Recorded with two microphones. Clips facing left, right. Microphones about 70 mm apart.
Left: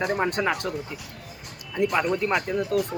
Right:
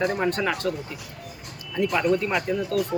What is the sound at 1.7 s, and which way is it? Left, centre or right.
Speech, centre.